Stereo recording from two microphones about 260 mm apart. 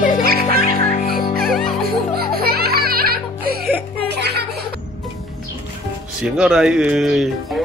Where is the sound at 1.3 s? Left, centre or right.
Centre.